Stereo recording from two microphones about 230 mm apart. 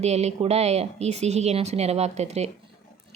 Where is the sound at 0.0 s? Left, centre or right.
Right.